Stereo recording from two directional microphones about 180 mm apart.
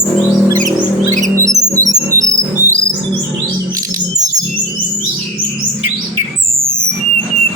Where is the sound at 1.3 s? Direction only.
15° right (ahead or behind).